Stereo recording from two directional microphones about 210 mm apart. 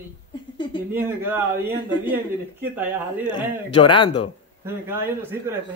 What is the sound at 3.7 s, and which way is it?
Speech, 20° left (ahead or behind).